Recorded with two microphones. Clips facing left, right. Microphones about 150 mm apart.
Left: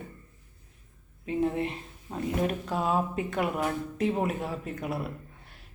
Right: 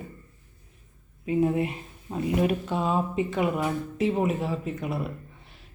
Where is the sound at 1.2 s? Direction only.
10° right (ahead or behind).